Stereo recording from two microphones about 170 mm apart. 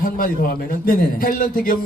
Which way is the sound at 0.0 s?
55° left (ahead or behind).